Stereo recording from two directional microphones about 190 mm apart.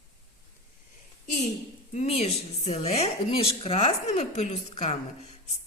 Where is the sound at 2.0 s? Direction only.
35° left (ahead or behind).